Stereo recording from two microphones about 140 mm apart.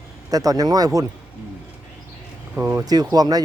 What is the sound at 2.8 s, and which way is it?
Speech, 25° right (ahead or behind).